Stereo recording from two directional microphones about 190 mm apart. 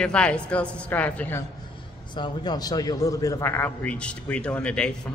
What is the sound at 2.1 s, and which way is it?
A man's voice, 25° left (ahead or behind).